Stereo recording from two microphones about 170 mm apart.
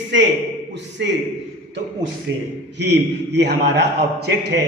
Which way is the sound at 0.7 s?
90° right.